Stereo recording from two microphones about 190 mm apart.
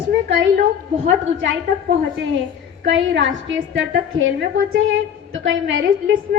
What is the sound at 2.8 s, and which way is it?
A woman's voice, 70° right (ahead or behind).